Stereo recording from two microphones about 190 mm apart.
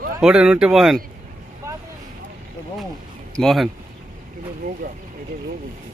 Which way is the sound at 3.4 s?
Centre (ahead or behind).